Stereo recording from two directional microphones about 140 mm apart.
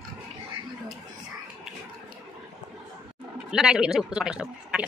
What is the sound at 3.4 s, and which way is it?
A woman's voice, 5° right (ahead or behind).